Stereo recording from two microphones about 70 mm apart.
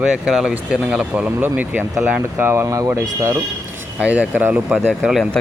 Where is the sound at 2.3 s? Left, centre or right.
Right.